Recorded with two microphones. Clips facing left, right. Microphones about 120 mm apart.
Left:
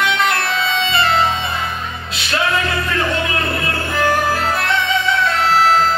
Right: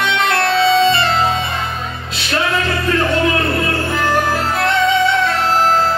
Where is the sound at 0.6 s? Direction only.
35° right (ahead or behind).